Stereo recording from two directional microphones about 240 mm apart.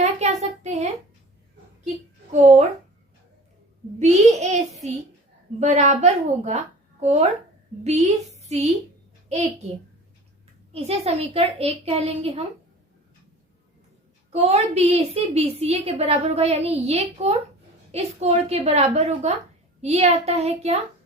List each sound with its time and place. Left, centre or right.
0.0 s a sound: right
4.0 s a woman's voice: right
10.7 s a woman's voice: right
14.3 s a woman's voice: right